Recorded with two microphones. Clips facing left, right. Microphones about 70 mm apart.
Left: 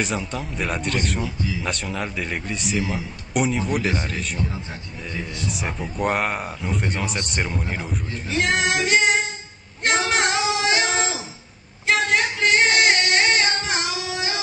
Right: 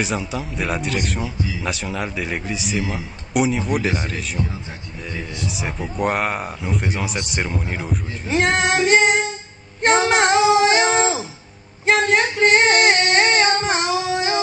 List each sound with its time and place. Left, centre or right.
0.0 s a man's voice: centre
5.5 s a man's voice: centre
8.4 s female singing: right